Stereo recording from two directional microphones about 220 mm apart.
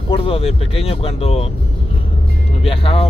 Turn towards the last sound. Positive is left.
turn(degrees=25)  # may be behind; listen again after turning